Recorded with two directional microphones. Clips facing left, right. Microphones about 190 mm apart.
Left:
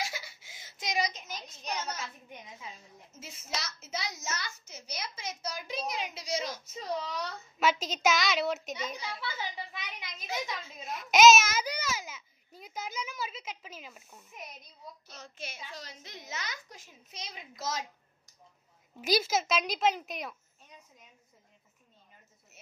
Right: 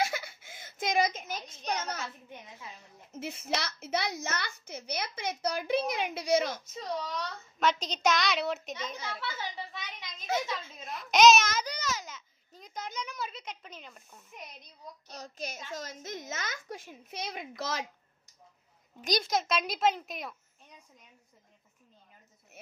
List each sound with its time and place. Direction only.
0.0 s a sound: 55° right (ahead or behind)
2.2 s a woman's voice: 10° left (ahead or behind)
3.1 s a child's voice: 60° right (ahead or behind)
6.6 s a sound: 10° left (ahead or behind)
15.0 s a child's voice: 40° right (ahead or behind); by 17.8 s 60° right (ahead or behind)
18.9 s a child's voice: 5° left (ahead or behind)